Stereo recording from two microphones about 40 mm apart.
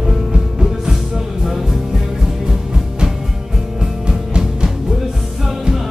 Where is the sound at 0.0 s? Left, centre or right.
Centre.